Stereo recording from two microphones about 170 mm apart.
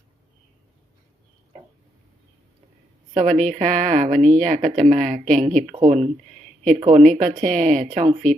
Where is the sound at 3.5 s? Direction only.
50° right (ahead or behind).